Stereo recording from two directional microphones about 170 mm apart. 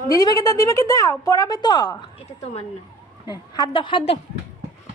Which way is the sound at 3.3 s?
25° left (ahead or behind).